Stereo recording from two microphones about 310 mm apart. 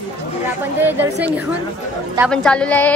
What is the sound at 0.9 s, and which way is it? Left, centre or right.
A woman's voice, centre.